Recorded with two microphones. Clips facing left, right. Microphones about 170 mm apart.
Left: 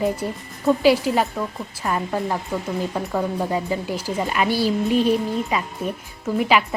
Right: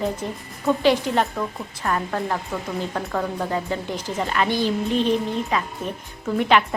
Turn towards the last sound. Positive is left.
turn(degrees=5)  # may be behind; listen again after turning